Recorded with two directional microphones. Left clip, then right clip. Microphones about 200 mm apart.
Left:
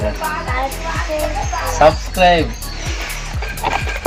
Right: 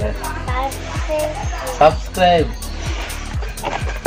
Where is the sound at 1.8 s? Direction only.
Centre (ahead or behind).